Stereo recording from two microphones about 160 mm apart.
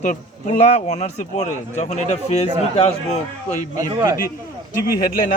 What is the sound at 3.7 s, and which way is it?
Speech, 20° right (ahead or behind).